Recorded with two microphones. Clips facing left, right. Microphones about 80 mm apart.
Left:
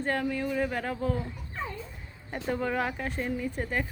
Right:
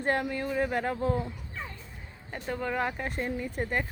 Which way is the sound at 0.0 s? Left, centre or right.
Centre.